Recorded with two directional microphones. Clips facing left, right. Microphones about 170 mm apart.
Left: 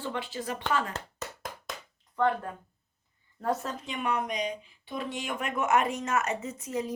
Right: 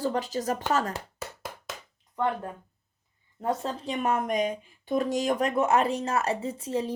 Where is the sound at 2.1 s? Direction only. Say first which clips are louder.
Left 1 dB; 15° right (ahead or behind).